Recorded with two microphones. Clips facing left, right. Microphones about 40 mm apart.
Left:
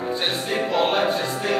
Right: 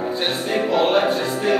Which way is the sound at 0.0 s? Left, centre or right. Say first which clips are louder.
Right 2 dB; centre.